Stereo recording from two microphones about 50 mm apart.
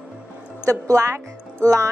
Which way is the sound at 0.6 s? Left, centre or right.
Right.